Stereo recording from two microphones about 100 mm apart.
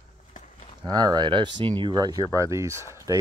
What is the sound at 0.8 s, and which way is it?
Speech, 45° right (ahead or behind).